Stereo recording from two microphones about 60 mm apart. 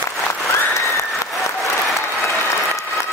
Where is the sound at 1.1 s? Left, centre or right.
Centre.